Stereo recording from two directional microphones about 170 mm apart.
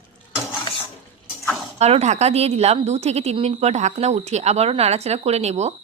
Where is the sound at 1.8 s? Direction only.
40° right (ahead or behind).